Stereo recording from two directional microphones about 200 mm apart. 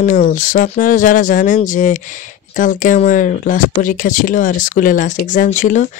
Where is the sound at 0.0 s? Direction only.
40° left (ahead or behind).